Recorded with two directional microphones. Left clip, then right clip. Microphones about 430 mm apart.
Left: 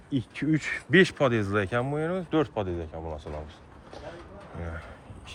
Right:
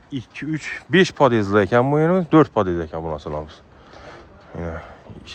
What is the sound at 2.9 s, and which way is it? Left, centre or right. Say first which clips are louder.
Speech: right 10 dB; right.